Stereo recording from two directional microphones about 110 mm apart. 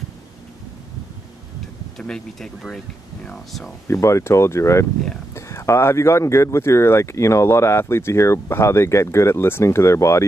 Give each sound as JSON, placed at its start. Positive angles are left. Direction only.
{"t": 2.0, "sound": "speech", "side_deg": 5}
{"t": 3.8, "sound": "speech", "side_deg": 25}